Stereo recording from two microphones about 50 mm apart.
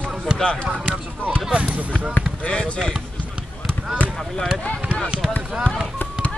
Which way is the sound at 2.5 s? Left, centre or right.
Left.